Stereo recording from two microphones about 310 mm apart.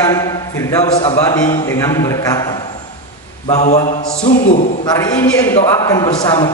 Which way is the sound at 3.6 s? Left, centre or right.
Left.